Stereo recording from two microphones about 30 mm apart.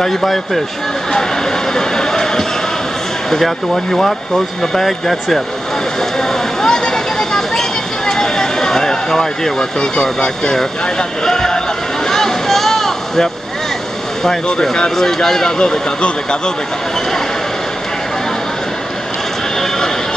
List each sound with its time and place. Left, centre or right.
0.0 s speech: centre
1.1 s speech: left
3.4 s speech: centre
5.9 s vehicle: centre
11.2 s a sound: centre
12.1 s vehicle: centre
14.2 s speech: centre